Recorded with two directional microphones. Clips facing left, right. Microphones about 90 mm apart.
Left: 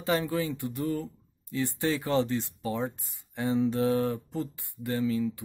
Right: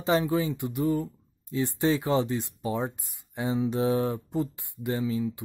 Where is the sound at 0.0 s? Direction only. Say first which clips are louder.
Right 3 dB; 20° right (ahead or behind).